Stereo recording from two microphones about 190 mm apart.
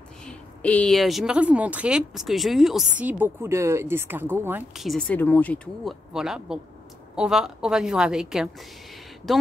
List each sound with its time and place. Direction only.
0.2 s speech: 5° left (ahead or behind)